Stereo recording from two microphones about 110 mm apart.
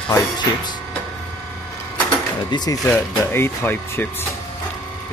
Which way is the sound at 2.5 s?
35° left (ahead or behind).